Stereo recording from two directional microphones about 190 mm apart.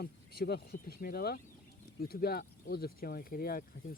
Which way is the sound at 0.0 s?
55° left (ahead or behind).